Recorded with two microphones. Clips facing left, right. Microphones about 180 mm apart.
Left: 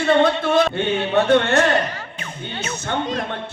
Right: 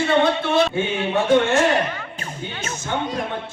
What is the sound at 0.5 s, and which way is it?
Music, 65° left (ahead or behind).